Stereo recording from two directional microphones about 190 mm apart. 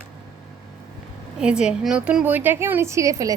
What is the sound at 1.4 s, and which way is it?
A woman's voice, 5° right (ahead or behind).